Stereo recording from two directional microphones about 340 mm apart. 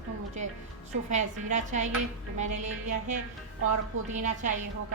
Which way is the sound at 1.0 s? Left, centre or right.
Right.